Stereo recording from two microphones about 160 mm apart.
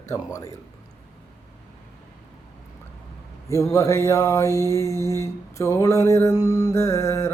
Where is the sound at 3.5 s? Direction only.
20° left (ahead or behind).